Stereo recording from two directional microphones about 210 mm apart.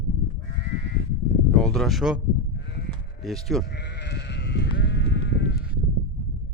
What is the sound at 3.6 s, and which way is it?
Sheep, 55° left (ahead or behind).